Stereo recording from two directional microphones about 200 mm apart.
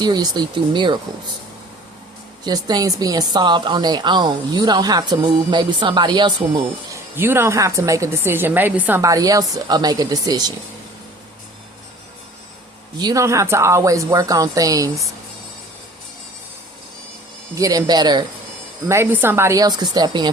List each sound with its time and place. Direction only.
0.0 s speech: 20° right (ahead or behind)
2.4 s a woman's voice: 20° right (ahead or behind)
13.0 s a woman's voice: 20° right (ahead or behind)
17.5 s a woman's voice: 15° right (ahead or behind)